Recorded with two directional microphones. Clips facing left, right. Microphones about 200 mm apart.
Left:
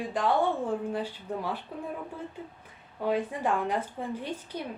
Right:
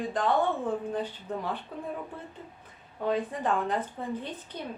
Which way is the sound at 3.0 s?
10° left (ahead or behind).